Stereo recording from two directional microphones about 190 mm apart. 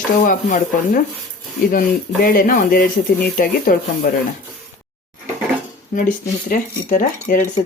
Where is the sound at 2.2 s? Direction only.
50° left (ahead or behind).